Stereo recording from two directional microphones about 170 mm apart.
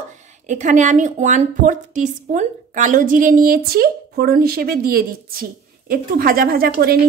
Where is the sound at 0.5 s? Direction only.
45° right (ahead or behind); by 7.0 s 60° right (ahead or behind).